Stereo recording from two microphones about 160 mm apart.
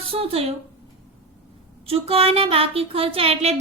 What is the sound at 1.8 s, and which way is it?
A woman's voice, 40° right (ahead or behind).